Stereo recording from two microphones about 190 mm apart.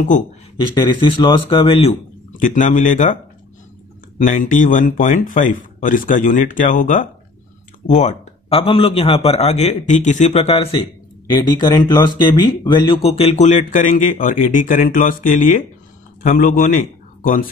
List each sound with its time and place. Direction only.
0.6 s speech: 25° left (ahead or behind)
2.4 s speech: 45° left (ahead or behind)
4.3 s speech: 45° left (ahead or behind)